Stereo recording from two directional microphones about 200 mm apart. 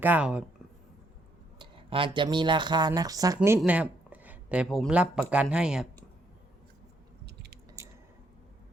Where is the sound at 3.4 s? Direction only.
5° right (ahead or behind).